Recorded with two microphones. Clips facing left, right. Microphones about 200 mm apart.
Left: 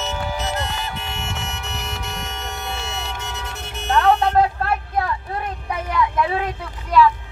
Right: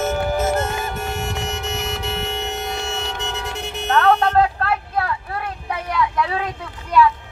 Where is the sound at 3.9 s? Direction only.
10° left (ahead or behind).